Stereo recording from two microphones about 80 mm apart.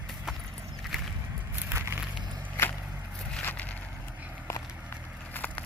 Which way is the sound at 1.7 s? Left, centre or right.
Right.